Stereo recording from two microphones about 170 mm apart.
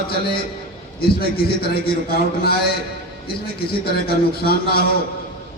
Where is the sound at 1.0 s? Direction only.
65° left (ahead or behind).